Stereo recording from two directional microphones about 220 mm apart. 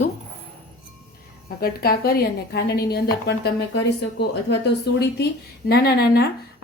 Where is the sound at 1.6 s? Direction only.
45° left (ahead or behind).